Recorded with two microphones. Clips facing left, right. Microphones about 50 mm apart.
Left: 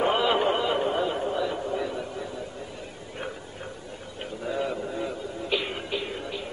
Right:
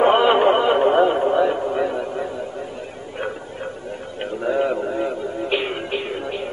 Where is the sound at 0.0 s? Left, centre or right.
Right.